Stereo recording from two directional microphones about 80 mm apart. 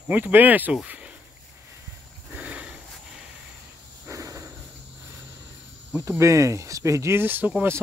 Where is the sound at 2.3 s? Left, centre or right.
Centre.